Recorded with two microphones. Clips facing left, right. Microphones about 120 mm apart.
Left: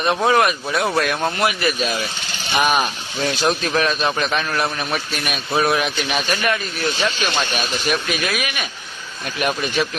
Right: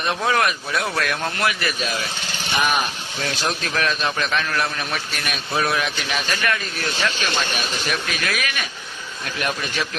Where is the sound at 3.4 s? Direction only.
20° left (ahead or behind).